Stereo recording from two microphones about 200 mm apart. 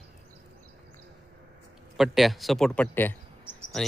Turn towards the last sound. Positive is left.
turn(degrees=0)  # may be behind; listen again after turning